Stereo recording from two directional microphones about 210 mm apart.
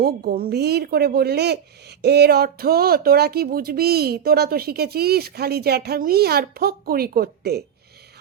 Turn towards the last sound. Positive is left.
turn(degrees=-45)  # may be behind; listen again after turning